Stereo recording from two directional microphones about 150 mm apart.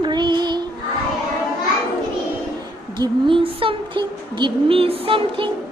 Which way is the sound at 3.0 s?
35° right (ahead or behind).